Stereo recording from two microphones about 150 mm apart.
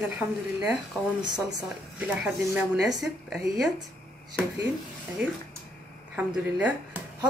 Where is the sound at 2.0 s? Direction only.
10° right (ahead or behind).